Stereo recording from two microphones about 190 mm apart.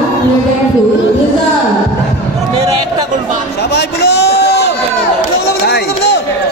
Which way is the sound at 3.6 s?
60° left (ahead or behind).